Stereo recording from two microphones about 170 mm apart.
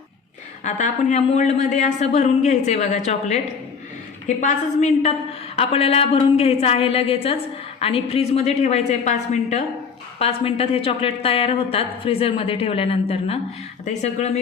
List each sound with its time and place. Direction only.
0.6 s a woman's voice: 45° left (ahead or behind)